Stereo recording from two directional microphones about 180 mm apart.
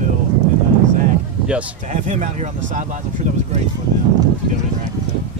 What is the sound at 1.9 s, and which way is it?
Speech, 40° right (ahead or behind).